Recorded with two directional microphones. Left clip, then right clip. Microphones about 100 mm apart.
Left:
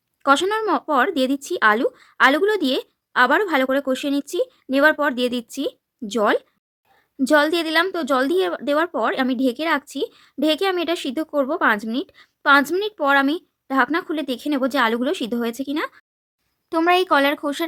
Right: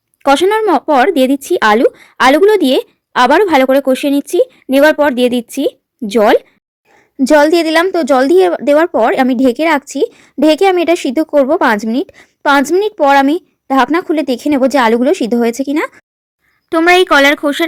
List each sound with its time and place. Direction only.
0.2 s a woman's voice: 20° right (ahead or behind)